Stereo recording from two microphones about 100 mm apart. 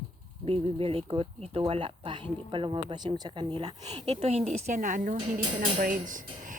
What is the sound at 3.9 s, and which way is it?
Speech, 90° right.